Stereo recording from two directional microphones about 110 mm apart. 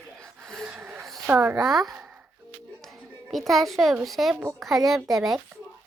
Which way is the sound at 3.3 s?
Centre (ahead or behind).